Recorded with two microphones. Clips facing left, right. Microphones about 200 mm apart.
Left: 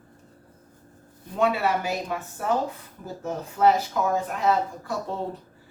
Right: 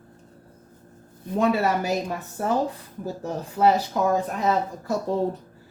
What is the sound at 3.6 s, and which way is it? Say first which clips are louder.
Speech: even; 10° right (ahead or behind).